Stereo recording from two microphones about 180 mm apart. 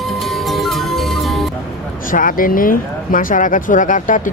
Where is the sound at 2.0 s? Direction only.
50° left (ahead or behind).